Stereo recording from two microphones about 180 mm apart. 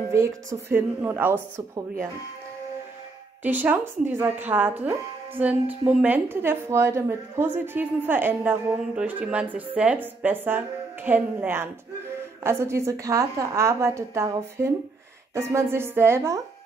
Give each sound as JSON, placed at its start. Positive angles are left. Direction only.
{"t": 0.1, "sound": "speech", "side_deg": -15}
{"t": 3.4, "sound": "speech", "side_deg": -10}